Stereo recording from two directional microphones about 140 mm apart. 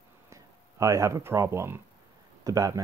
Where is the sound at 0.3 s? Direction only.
20° right (ahead or behind).